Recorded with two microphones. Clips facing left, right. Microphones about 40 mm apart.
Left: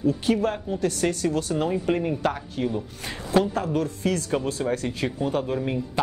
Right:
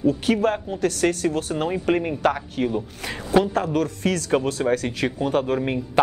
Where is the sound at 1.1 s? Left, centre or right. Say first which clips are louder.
Right 1 dB; right.